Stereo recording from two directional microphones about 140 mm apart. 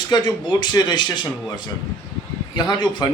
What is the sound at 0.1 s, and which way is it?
A man's voice, 30° left (ahead or behind).